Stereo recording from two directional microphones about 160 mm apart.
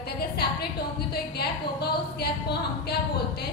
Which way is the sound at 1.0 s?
80° left.